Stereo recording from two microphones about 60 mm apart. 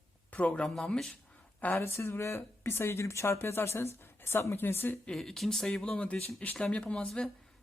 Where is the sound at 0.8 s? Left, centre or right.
Centre.